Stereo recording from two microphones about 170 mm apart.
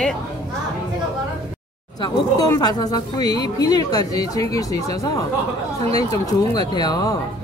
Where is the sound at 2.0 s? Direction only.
25° left (ahead or behind).